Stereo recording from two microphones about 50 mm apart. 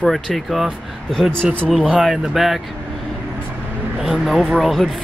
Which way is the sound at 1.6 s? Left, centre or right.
Centre.